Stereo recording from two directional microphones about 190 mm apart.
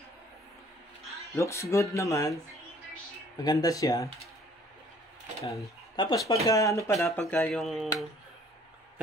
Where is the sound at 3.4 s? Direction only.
20° left (ahead or behind).